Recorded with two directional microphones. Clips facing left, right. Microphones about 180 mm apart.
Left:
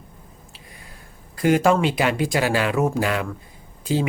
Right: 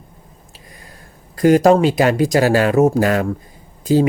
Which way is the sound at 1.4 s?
40° right (ahead or behind).